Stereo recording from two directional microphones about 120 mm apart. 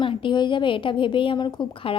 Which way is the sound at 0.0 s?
40° left (ahead or behind).